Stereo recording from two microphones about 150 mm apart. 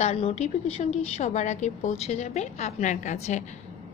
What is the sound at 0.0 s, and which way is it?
A woman's voice, 45° left (ahead or behind).